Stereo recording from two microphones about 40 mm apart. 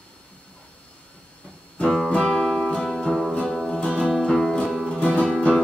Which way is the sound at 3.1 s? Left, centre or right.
Centre.